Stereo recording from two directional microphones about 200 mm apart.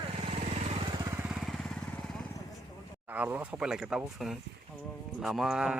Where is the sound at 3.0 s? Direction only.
10° right (ahead or behind).